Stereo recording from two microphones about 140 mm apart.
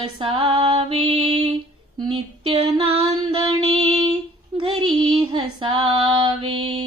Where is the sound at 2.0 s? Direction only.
35° right (ahead or behind).